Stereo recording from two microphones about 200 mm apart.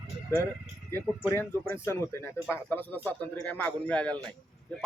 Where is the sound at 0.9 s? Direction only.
10° left (ahead or behind).